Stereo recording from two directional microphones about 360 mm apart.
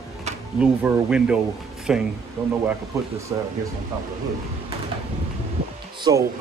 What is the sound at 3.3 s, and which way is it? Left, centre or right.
Speech, centre.